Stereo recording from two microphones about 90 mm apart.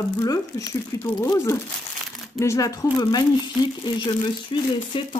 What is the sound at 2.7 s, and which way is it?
Speech, 50° left (ahead or behind).